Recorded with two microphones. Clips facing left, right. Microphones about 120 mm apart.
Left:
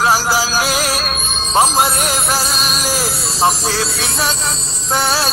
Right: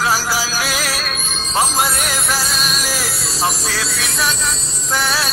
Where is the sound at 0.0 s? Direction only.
25° left (ahead or behind).